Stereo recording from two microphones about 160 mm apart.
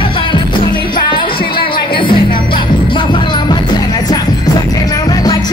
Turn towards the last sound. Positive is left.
turn(degrees=25)  # may be behind; listen again after turning